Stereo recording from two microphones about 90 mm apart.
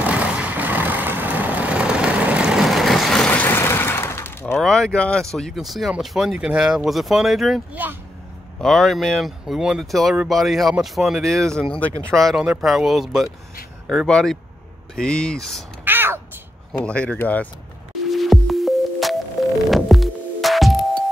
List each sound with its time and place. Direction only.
0.0 s vehicle: 15° right (ahead or behind); by 3.3 s 5° left (ahead or behind)
3.4 s vehicle: 30° left (ahead or behind)
4.6 s speech: 5° left (ahead or behind)
15.8 s cat: 25° right (ahead or behind)
16.8 s speech: 15° left (ahead or behind)
18.1 s music: centre (ahead or behind)